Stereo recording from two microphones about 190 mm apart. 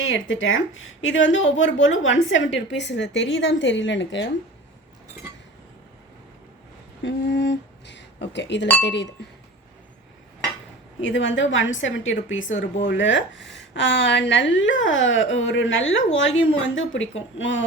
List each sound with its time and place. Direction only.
0.0 s a woman's voice: 90° left
1.3 s a woman's voice: 80° left
7.0 s a woman's voice: 65° left (ahead or behind)
11.0 s a woman's voice: 75° left (ahead or behind); by 12.6 s 90° left
12.8 s a woman's voice: 75° left (ahead or behind)